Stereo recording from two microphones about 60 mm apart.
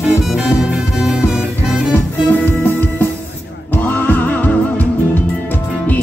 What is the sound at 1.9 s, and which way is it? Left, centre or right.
Music, left.